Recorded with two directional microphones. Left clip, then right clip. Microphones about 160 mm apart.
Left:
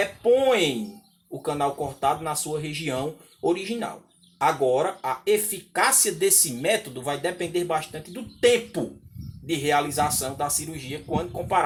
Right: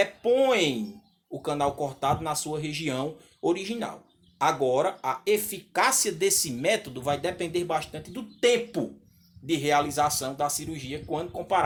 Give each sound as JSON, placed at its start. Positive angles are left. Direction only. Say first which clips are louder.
{"t": 0.0, "sound": "a sound", "louder": "left 2 dB", "side_deg": -35}
{"t": 1.4, "sound": "speech", "louder": "left 1 dB", "side_deg": -35}
{"t": 11.1, "sound": "speech", "louder": "left 3 dB", "side_deg": -25}